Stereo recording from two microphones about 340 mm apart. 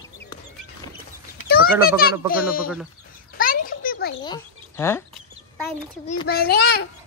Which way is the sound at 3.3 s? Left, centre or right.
Left.